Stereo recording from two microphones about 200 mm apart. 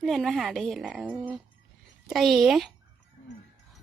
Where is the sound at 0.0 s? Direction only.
Centre (ahead or behind).